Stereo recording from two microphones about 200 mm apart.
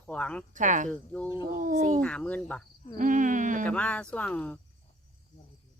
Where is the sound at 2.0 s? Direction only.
5° left (ahead or behind).